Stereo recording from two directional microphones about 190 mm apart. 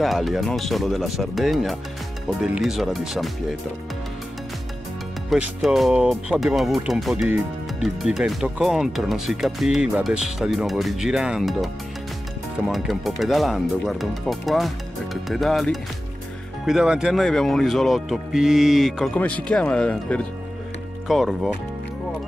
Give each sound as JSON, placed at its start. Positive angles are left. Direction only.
{"t": 0.0, "sound": "speech", "side_deg": 0}
{"t": 5.3, "sound": "speech", "side_deg": 0}